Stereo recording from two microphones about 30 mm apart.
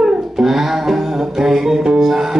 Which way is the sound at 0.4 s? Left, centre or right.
Centre.